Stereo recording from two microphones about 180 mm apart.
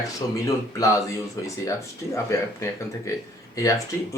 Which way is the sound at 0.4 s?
20° left (ahead or behind).